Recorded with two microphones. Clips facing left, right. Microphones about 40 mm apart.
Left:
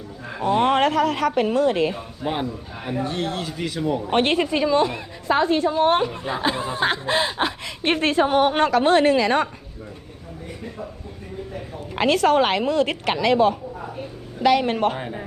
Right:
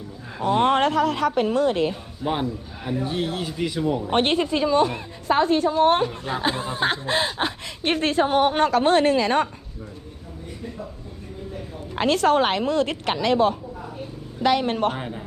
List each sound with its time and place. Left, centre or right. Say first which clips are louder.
0.5 s speech: left 1 dB; left
2.2 s a man's voice: right 1 dB; centre
3.0 s speech: left 1 dB; centre
4.1 s speech: left 2 dB; left
4.6 s a woman's voice: even; left
6.7 s a woman's voice: left 2 dB; left
12.0 s a woman's voice: left 1 dB; left
14.9 s a man's voice: left 1 dB; centre